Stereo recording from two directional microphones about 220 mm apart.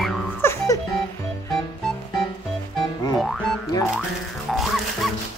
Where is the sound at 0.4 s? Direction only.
10° left (ahead or behind).